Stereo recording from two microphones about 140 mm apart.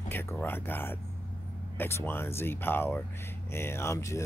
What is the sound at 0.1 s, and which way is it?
Speech, 15° left (ahead or behind).